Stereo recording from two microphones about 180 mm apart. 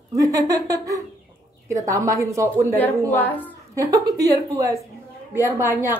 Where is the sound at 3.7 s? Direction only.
20° right (ahead or behind).